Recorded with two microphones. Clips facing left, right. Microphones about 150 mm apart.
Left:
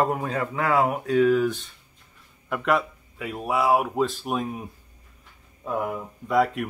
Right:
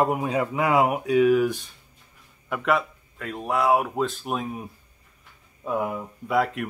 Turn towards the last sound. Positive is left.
turn(degrees=0)  # may be behind; listen again after turning